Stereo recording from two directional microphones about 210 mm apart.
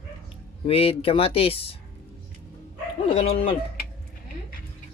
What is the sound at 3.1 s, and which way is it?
Speech, 25° left (ahead or behind).